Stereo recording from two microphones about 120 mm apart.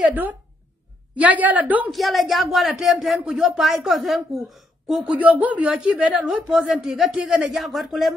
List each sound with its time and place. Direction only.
0.1 s a woman's voice: 15° right (ahead or behind)
1.9 s speech: centre (ahead or behind)